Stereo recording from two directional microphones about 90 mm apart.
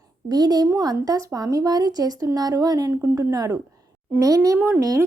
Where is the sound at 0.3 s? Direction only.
45° right (ahead or behind).